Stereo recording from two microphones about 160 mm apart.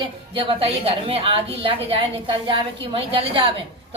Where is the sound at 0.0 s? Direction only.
35° right (ahead or behind).